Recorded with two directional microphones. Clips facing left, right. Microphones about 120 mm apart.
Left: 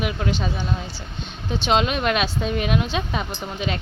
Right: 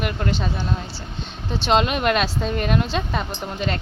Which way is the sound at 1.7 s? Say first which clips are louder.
Right 2 dB; centre (ahead or behind).